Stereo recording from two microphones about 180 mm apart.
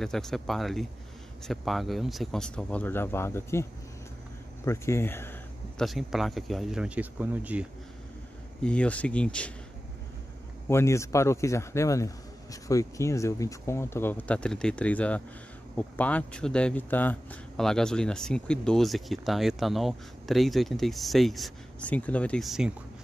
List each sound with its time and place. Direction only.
0.0 s speech: 5° left (ahead or behind)
4.6 s speech: 15° left (ahead or behind)
5.8 s speech: centre (ahead or behind)
8.6 s speech: 5° left (ahead or behind)
10.7 s speech: 15° left (ahead or behind); by 22.7 s centre (ahead or behind)